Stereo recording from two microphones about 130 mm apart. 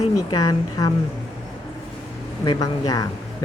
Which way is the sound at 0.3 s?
30° left (ahead or behind).